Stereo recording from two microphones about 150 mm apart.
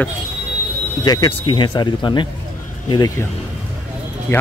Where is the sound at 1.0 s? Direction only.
25° left (ahead or behind).